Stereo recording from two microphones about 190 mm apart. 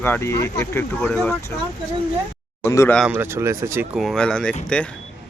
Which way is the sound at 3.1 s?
10° right (ahead or behind).